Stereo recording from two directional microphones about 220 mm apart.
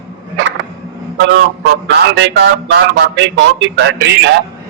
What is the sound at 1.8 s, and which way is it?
A man's voice, 50° right (ahead or behind).